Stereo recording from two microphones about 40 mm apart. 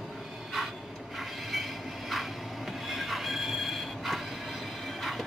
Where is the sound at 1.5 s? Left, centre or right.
Centre.